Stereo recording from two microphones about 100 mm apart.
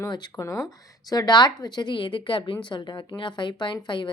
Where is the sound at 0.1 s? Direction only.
45° left (ahead or behind).